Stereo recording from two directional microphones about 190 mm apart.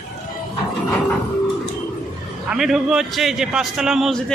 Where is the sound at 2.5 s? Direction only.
Centre (ahead or behind).